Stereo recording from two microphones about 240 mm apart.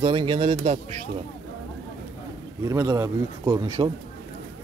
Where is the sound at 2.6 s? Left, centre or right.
Centre.